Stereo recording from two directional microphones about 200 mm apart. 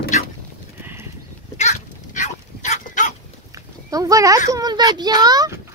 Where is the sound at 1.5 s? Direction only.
35° left (ahead or behind).